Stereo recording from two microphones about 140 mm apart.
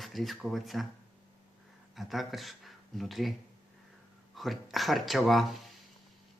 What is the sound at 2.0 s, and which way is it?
Speech, centre (ahead or behind).